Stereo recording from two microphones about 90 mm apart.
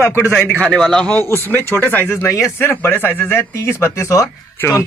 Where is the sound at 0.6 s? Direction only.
5° left (ahead or behind).